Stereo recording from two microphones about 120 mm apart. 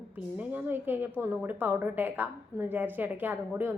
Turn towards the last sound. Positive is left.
turn(degrees=-15)  # may be behind; listen again after turning